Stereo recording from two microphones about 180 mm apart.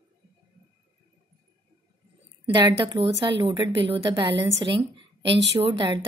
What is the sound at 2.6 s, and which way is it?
A woman's voice, 25° right (ahead or behind).